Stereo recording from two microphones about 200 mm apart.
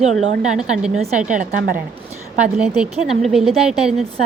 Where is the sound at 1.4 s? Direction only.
45° right (ahead or behind).